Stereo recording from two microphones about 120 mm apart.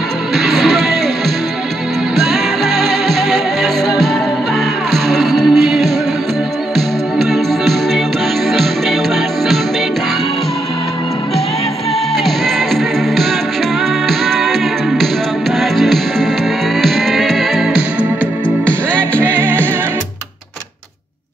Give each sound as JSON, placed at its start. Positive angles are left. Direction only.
{"t": 0.4, "sound": "music", "side_deg": 0}
{"t": 2.1, "sound": "music", "side_deg": 0}
{"t": 12.3, "sound": "music", "side_deg": 0}
{"t": 18.7, "sound": "music", "side_deg": 10}
{"t": 19.2, "sound": "music", "side_deg": -15}